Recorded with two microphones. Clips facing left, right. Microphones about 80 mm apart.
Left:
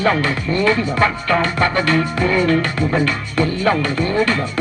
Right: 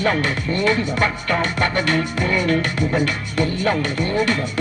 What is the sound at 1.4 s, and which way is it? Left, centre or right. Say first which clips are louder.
Music: left 3 dB; left.